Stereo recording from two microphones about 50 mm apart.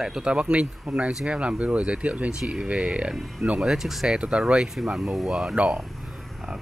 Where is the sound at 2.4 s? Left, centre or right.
Centre.